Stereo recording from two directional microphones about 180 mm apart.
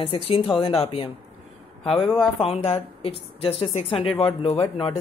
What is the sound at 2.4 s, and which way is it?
Speech, 35° left (ahead or behind).